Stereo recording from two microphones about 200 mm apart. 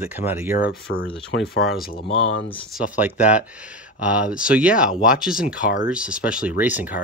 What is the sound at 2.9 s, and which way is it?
Speech, 5° right (ahead or behind).